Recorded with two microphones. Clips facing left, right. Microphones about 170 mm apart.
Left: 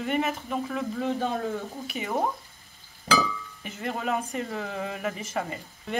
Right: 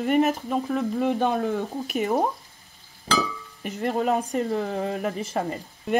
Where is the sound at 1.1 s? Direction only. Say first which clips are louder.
Right 4 dB; 60° right (ahead or behind).